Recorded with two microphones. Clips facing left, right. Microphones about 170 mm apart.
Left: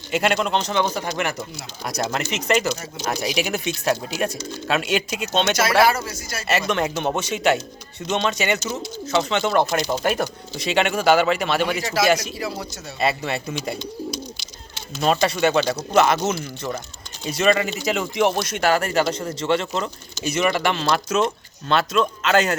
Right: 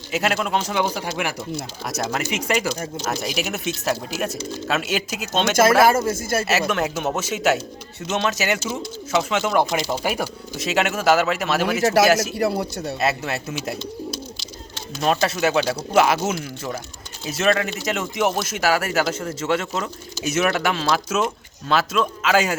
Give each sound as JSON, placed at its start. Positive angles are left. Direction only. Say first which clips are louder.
{"t": 0.1, "sound": "speech", "louder": "left 1 dB", "side_deg": -5}
{"t": 5.8, "sound": "speech", "louder": "right 3 dB", "side_deg": -45}
{"t": 6.5, "sound": "speech", "louder": "left 5 dB", "side_deg": -5}
{"t": 12.4, "sound": "speech", "louder": "right 7 dB", "side_deg": -60}
{"t": 13.0, "sound": "speech", "louder": "left 2 dB", "side_deg": 0}